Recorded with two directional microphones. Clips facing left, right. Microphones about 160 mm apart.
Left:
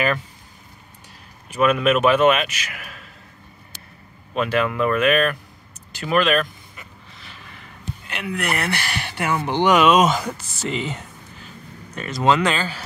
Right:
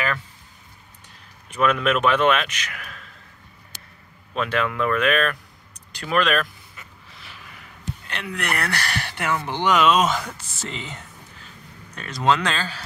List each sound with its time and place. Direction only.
1.5 s speech: 10° left (ahead or behind)
4.3 s speech: 5° left (ahead or behind)
7.2 s gasp: 10° right (ahead or behind)
8.1 s speech: 10° left (ahead or behind)
8.5 s speech: 20° left (ahead or behind)
11.9 s speech: 5° left (ahead or behind)